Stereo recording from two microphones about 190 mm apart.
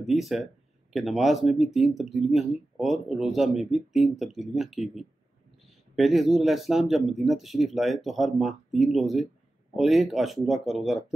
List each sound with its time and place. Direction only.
0.0 s speech: centre (ahead or behind)